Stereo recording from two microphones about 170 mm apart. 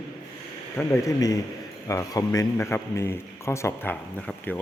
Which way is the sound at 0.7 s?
15° left (ahead or behind).